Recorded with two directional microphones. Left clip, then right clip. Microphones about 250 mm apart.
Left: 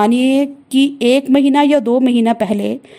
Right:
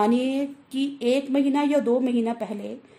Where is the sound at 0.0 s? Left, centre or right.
Left.